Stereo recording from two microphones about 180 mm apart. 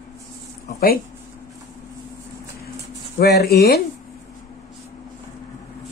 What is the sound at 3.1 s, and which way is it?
Speech, 60° left (ahead or behind).